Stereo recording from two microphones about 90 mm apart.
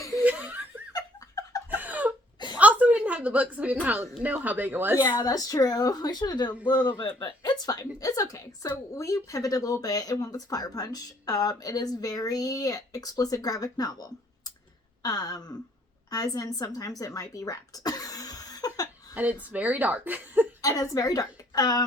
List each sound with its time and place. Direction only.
0.3 s laughter: 15° right (ahead or behind)
0.9 s laughter: 40° left (ahead or behind)
1.7 s a sound: 20° right (ahead or behind)
4.2 s speech: 20° right (ahead or behind)
4.9 s speech: 25° left (ahead or behind)
5.2 s speech: 45° left (ahead or behind)
17.0 s a sound: 40° left (ahead or behind)
19.1 s a woman's voice: 15° right (ahead or behind)
20.6 s speech: 40° left (ahead or behind)